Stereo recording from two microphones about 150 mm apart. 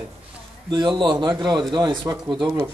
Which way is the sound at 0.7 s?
30° right (ahead or behind).